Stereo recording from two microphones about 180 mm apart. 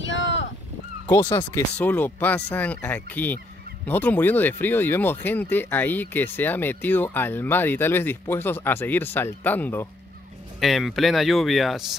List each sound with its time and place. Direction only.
0.0 s a sound: 90° left
1.0 s speech: 15° left (ahead or behind)
10.6 s speech: centre (ahead or behind)